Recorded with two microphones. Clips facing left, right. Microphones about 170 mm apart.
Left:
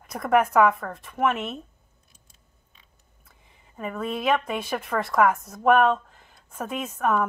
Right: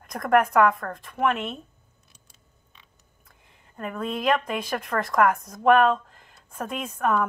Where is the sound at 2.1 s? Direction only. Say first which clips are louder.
Right 2 dB; 75° right (ahead or behind).